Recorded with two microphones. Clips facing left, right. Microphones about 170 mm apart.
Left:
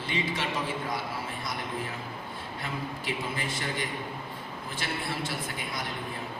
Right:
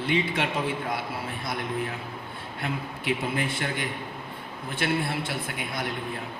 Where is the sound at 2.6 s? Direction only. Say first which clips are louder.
Right 4 dB; 60° right (ahead or behind).